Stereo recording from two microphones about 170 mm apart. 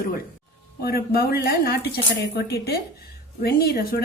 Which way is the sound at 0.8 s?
65° left (ahead or behind).